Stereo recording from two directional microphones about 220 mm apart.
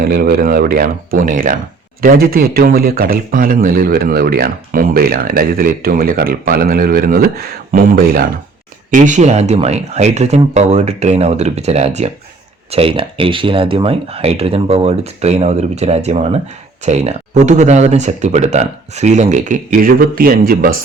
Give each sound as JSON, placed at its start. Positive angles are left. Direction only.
{"t": 0.0, "sound": "speech", "side_deg": -45}